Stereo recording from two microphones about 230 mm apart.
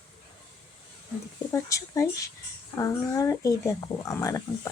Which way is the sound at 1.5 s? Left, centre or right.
Centre.